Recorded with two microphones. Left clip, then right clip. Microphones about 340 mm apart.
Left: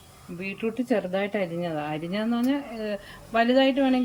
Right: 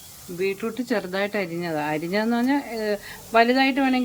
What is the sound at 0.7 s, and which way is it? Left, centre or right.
Speech, right.